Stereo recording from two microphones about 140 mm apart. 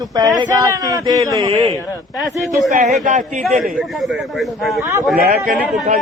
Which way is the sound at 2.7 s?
60° right (ahead or behind).